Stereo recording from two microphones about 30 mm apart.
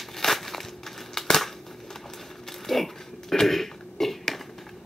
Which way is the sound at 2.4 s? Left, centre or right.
Centre.